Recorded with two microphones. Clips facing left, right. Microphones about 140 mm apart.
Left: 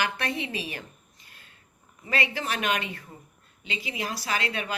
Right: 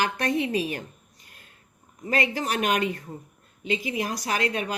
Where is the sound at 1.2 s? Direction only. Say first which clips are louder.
Right 2 dB; 45° right (ahead or behind).